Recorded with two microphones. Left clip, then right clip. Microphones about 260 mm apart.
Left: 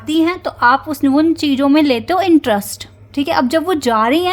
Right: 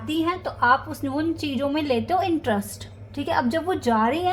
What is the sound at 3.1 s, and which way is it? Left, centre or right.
Speech, left.